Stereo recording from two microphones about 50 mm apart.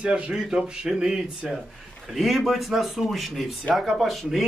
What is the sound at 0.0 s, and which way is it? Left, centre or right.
A man's voice, centre.